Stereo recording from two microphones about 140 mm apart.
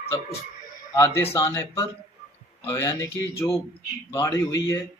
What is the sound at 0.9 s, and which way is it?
Speech, 20° left (ahead or behind).